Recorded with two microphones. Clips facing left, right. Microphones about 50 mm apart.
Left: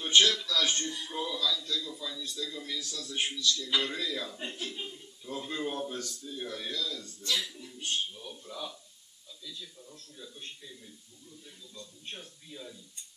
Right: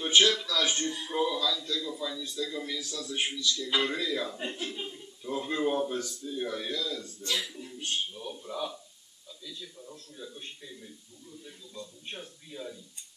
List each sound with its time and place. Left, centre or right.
0.0 s a man's voice: centre
7.3 s a sound: centre
8.1 s a man's voice: centre